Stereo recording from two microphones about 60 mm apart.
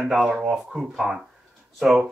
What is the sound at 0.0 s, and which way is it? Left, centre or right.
Speech, centre.